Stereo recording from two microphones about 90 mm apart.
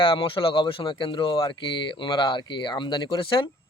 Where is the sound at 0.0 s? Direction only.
75° left (ahead or behind).